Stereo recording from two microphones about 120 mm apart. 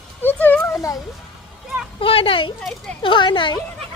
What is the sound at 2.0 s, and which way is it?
A woman's voice, 50° left (ahead or behind).